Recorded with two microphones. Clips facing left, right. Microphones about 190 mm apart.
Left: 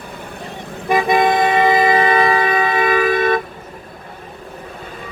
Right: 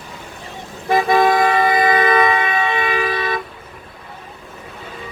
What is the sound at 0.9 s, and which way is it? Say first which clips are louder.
Toot: even; 15° left (ahead or behind).